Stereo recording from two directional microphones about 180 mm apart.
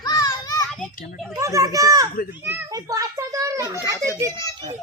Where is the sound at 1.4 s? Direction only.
15° right (ahead or behind).